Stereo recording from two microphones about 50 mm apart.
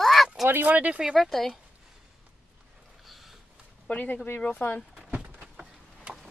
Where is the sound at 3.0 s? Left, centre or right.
Centre.